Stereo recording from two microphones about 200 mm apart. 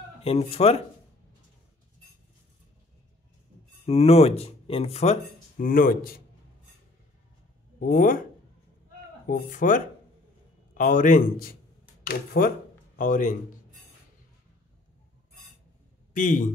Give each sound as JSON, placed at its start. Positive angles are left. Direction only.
{"t": 0.2, "sound": "speech", "side_deg": 30}
{"t": 3.8, "sound": "speech", "side_deg": 30}
{"t": 7.8, "sound": "a man's voice", "side_deg": 45}
{"t": 9.3, "sound": "a man's voice", "side_deg": 40}
{"t": 16.1, "sound": "a man's voice", "side_deg": 40}